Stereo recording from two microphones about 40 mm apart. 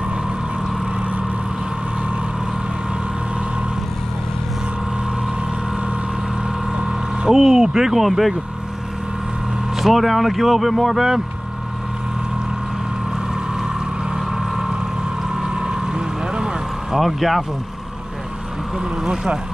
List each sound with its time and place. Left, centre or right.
6.8 s vehicle: right
7.3 s speech: centre
9.8 s speech: centre
14.1 s vehicle: centre
15.3 s boat: centre
17.0 s speech: centre
19.0 s speech: right